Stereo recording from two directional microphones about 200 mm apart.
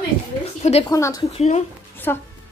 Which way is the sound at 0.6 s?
30° left (ahead or behind).